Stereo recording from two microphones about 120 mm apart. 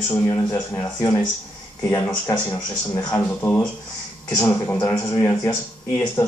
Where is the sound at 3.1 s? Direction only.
15° left (ahead or behind).